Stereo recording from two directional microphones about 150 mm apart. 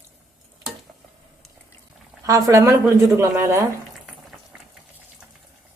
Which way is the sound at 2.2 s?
25° right (ahead or behind).